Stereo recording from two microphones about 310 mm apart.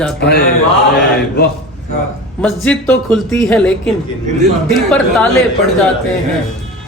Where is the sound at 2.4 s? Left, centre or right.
Centre.